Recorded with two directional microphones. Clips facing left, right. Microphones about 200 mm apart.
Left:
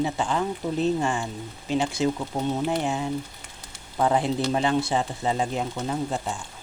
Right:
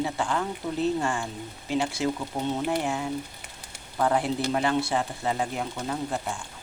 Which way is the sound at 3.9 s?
20° left (ahead or behind).